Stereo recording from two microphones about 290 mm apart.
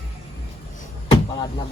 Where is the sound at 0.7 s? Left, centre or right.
Centre.